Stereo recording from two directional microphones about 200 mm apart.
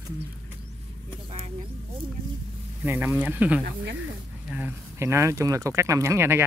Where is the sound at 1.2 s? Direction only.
30° right (ahead or behind).